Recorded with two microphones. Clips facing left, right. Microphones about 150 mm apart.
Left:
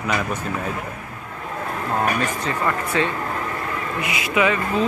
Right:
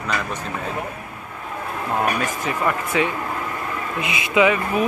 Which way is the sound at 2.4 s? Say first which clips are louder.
Even; 15° right (ahead or behind).